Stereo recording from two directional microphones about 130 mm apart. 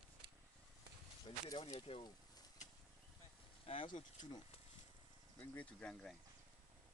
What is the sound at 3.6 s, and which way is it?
Speech, 40° left (ahead or behind).